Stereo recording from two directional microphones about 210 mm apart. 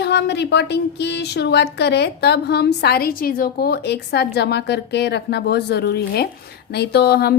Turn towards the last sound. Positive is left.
turn(degrees=50)  # may be behind; listen again after turning